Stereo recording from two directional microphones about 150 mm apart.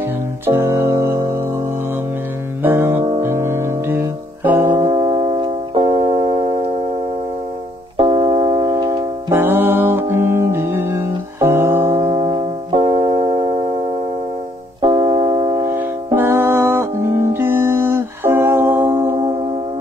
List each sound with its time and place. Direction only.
0.5 s music: 20° right (ahead or behind)
2.6 s music: 15° right (ahead or behind)
4.9 s music: 30° right (ahead or behind)
8.0 s music: 35° right (ahead or behind); by 12.1 s 20° right (ahead or behind)
12.1 s music: 30° right (ahead or behind)